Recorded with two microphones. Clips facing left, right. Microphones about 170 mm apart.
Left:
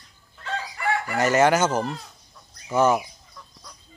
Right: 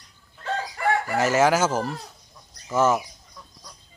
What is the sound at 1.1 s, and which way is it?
Speech, 5° right (ahead or behind).